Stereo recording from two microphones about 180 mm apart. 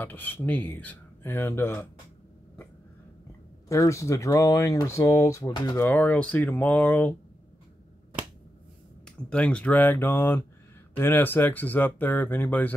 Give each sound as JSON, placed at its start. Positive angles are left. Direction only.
{"t": 0.0, "sound": "speech", "side_deg": 10}
{"t": 3.6, "sound": "speech", "side_deg": 15}
{"t": 9.3, "sound": "speech", "side_deg": 5}